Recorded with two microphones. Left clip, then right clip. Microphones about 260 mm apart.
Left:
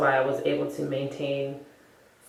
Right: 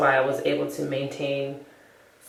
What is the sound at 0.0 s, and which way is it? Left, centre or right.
Speech, centre.